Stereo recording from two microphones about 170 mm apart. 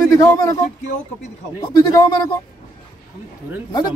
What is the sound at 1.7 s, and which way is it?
Speech, 25° left (ahead or behind).